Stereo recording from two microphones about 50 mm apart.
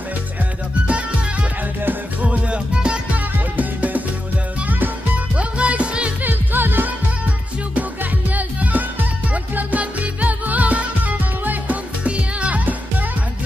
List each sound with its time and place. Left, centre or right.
0.8 s music: right
3.5 s music: right
5.3 s music: right
6.2 s music: right
8.0 s music: right